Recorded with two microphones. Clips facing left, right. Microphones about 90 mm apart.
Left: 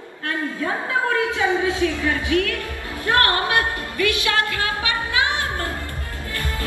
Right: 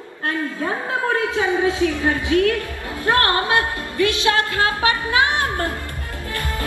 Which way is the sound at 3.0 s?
25° right (ahead or behind).